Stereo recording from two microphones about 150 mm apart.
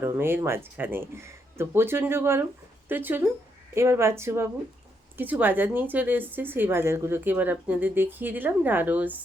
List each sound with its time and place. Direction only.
0.0 s a woman's voice: 15° right (ahead or behind)